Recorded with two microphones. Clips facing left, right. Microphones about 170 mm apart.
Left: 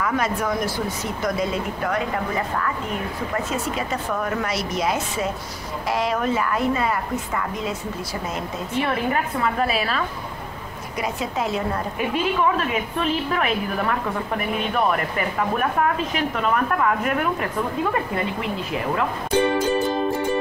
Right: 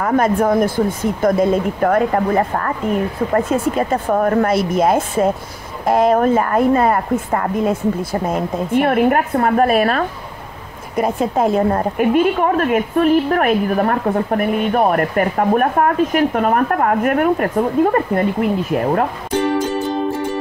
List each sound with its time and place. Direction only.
0.0 s a woman's voice: 50° right (ahead or behind)